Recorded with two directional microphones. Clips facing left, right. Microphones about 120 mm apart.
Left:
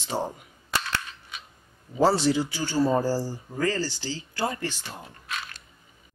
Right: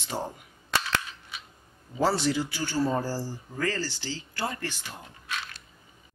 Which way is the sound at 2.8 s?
10° left (ahead or behind).